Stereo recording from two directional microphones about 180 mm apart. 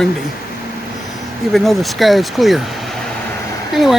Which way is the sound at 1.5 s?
Centre (ahead or behind).